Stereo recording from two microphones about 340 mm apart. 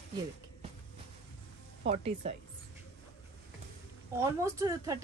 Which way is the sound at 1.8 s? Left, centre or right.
Centre.